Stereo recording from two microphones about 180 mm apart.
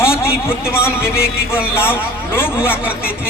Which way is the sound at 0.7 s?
15° left (ahead or behind).